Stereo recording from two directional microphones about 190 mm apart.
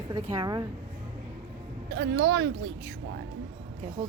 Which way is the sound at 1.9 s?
65° right (ahead or behind).